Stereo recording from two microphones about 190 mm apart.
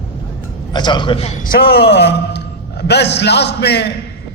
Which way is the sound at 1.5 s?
55° left (ahead or behind).